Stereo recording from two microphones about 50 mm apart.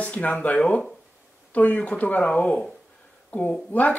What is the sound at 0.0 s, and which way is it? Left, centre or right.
Speech, left.